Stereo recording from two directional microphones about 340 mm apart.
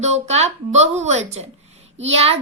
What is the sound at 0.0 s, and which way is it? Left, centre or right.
A woman's voice, centre.